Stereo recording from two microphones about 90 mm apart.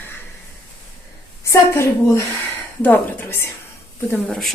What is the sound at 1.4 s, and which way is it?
A woman's voice, 30° left (ahead or behind).